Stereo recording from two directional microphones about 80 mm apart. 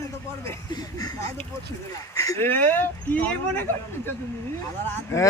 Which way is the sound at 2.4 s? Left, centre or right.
Left.